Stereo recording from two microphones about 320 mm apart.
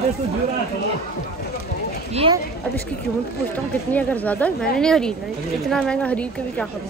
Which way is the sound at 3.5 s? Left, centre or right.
Centre.